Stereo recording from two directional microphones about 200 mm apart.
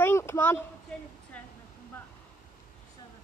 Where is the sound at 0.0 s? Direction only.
15° left (ahead or behind).